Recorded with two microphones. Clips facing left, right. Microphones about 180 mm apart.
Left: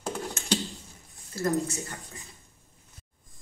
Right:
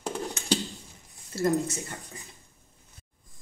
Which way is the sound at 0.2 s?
Centre (ahead or behind).